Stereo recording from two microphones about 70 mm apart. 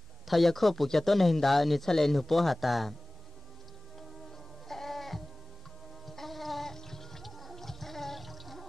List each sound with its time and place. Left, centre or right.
0.3 s speech: centre
4.6 s music: centre
6.0 s gargling: centre